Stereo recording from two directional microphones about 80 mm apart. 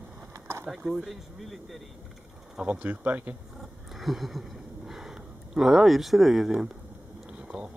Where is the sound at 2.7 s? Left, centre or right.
Centre.